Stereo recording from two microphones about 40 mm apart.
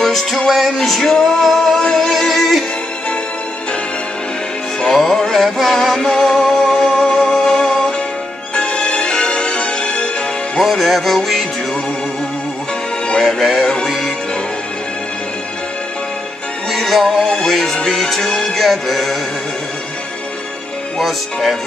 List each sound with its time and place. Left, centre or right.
0.0 s music: centre
4.8 s music: centre
6.5 s music: centre
8.5 s music: left
10.6 s music: centre
13.2 s music: centre
16.7 s music: centre
21.0 s music: centre